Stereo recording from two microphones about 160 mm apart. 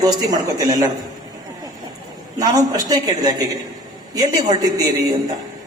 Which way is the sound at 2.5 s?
25° right (ahead or behind).